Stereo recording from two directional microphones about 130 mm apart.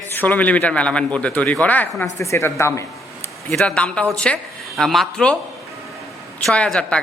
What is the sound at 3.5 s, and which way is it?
A man's voice, 5° left (ahead or behind).